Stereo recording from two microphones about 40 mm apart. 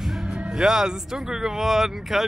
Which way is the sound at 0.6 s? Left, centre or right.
Centre.